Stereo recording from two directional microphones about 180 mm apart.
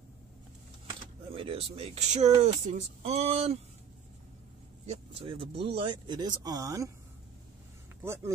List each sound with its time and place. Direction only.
1.3 s speech: 30° right (ahead or behind)
4.8 s speech: 30° right (ahead or behind)
8.0 s speech: 15° right (ahead or behind)